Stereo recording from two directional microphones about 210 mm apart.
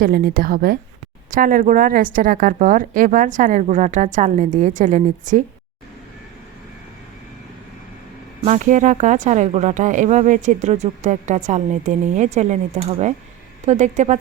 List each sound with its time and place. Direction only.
0.0 s speech: 45° right (ahead or behind)
8.4 s speech: 35° right (ahead or behind)